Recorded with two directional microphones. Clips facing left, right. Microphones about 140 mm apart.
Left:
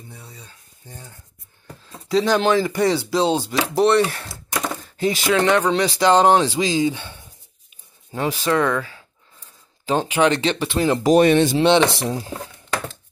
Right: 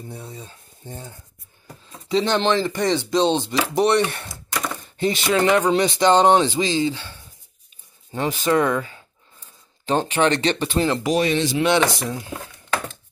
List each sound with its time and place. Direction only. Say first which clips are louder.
0.1 s speech: right 7 dB; 25° right (ahead or behind)
2.0 s speech: left 2 dB; 5° left (ahead or behind)
6.8 s speech: left 2 dB; 20° left (ahead or behind)
8.1 s speech: even; 5° left (ahead or behind)
11.0 s speech: left 6 dB; 45° left (ahead or behind)
11.5 s speech: left 3 dB; 25° left (ahead or behind)